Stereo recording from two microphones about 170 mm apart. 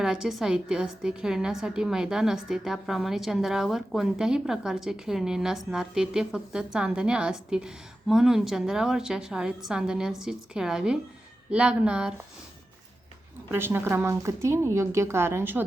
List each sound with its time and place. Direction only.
0.0 s a woman's voice: 5° right (ahead or behind)
13.5 s a woman's voice: 15° right (ahead or behind)